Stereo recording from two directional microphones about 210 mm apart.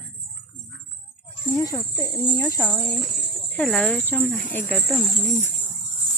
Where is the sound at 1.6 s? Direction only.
15° left (ahead or behind).